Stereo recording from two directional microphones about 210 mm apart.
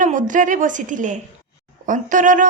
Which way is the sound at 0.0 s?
35° right (ahead or behind).